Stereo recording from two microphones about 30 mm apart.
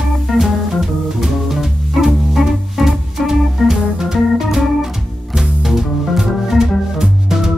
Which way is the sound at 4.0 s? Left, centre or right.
Centre.